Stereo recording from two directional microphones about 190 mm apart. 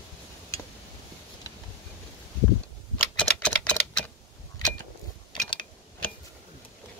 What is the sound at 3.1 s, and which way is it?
Typewriter, 5° left (ahead or behind).